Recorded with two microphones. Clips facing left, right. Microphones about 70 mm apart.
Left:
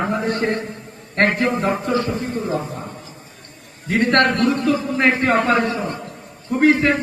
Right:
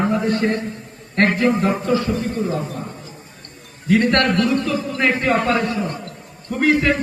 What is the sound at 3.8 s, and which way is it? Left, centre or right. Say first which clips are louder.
A man's voice: even; left.